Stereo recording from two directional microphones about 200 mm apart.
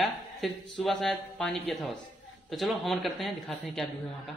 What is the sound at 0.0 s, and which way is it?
A man's voice, centre (ahead or behind).